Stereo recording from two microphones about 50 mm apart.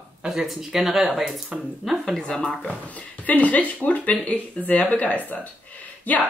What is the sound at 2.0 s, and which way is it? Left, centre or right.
Speech, centre.